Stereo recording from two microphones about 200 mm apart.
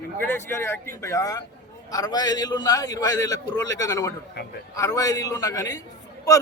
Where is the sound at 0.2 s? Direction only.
10° left (ahead or behind).